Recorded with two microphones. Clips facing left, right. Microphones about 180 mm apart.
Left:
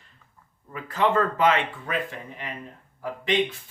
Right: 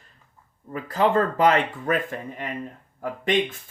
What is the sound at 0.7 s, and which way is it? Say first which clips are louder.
Speech: right 2 dB; 35° right (ahead or behind).